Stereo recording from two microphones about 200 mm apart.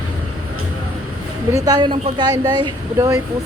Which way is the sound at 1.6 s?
20° right (ahead or behind).